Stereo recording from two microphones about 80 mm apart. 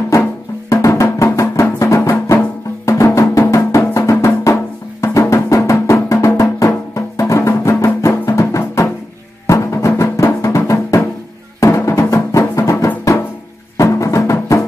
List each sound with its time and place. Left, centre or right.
0.1 s music: left
12.7 s music: left
13.7 s music: left